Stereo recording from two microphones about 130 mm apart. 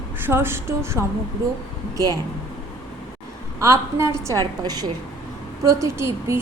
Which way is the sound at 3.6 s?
25° right (ahead or behind).